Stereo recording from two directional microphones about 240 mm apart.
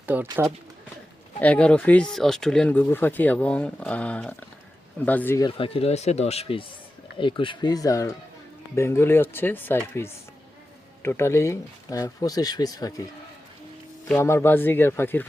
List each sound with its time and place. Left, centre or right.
0.0 s speech: centre
1.4 s speech: centre
5.5 s speech: left
14.1 s speech: centre